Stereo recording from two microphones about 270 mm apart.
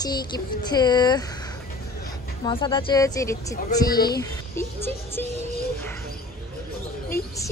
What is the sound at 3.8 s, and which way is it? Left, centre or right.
Speech, left.